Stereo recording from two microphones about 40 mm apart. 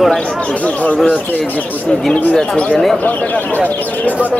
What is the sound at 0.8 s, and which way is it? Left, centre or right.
Speech, left.